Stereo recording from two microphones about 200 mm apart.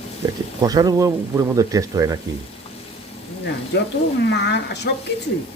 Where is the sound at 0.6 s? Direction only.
20° right (ahead or behind).